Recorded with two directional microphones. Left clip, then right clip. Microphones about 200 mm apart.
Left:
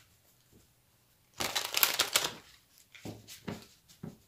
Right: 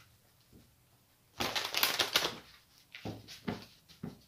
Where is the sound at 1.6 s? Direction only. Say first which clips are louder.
Left 2 dB; 25° left (ahead or behind).